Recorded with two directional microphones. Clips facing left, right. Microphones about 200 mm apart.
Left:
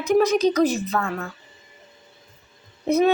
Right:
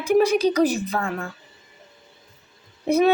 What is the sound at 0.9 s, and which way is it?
Speech, 30° right (ahead or behind).